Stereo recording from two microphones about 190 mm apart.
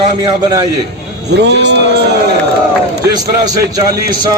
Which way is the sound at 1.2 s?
65° right (ahead or behind).